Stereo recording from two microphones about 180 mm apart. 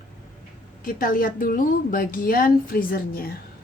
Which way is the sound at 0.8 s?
50° left (ahead or behind).